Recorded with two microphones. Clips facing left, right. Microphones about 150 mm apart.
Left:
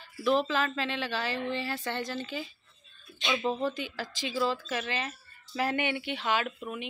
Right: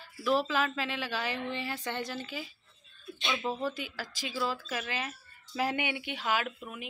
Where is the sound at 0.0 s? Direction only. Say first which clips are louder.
Left 2 dB; 5° right (ahead or behind).